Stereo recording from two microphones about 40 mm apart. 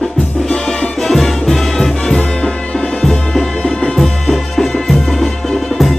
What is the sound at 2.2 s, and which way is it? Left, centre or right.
Music, left.